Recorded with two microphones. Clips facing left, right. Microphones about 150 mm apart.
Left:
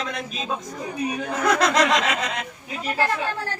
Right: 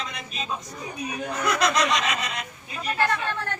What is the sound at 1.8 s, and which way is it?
Speech, 90° left.